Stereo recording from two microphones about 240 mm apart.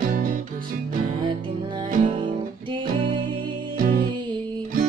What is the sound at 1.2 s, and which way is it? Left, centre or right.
Music, centre.